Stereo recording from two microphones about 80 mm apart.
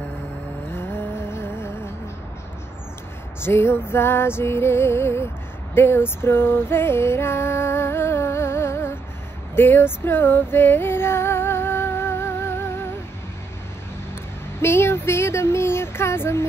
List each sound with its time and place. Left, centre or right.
0.7 s music: left
3.4 s music: left
5.8 s female singing: left
14.6 s a sound: left